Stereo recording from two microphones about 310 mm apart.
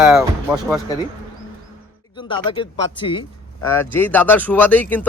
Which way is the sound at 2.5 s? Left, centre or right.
Centre.